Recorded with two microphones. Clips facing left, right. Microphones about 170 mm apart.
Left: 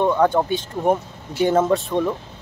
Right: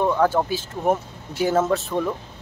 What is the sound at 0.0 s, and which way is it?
Speech, 5° right (ahead or behind).